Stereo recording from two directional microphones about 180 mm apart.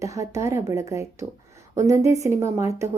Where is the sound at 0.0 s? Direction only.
15° right (ahead or behind).